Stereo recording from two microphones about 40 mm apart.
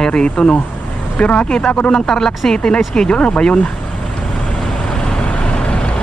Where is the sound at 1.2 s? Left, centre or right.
Left.